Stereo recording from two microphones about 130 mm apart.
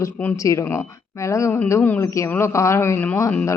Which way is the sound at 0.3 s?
25° left (ahead or behind).